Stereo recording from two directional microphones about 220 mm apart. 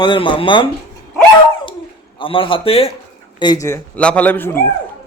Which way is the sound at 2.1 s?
25° left (ahead or behind).